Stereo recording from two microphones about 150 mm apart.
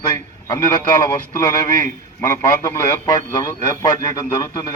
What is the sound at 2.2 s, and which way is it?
Speech, 20° left (ahead or behind).